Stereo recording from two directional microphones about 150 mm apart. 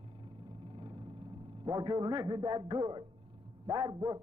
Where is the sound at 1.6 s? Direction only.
25° right (ahead or behind).